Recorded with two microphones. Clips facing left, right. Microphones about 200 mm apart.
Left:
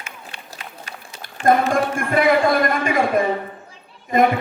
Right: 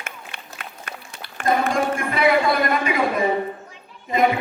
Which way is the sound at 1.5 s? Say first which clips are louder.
Left 3 dB; 50° left (ahead or behind).